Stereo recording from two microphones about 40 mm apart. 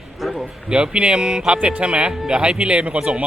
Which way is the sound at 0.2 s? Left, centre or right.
Centre.